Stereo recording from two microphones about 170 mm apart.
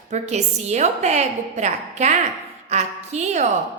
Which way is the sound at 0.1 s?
40° right (ahead or behind).